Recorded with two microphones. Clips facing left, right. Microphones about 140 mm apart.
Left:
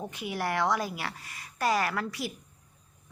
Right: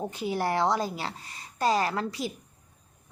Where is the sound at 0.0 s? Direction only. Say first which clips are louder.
Right 4 dB; 30° right (ahead or behind).